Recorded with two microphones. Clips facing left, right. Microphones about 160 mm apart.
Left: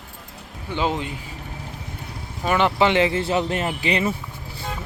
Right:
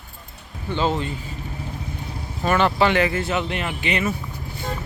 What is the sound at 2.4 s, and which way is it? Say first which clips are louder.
Speech: even; 15° left (ahead or behind).